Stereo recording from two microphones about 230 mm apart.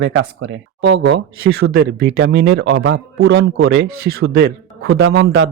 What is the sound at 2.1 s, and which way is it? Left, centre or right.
Speech, right.